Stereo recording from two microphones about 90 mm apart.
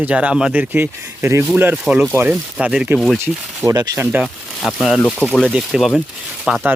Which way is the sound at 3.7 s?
45° right (ahead or behind).